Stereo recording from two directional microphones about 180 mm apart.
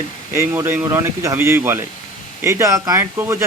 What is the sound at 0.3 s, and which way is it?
Speech, 15° right (ahead or behind).